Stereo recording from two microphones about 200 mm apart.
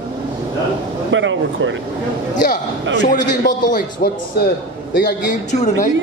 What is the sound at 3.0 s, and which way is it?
A man's voice, 40° left (ahead or behind).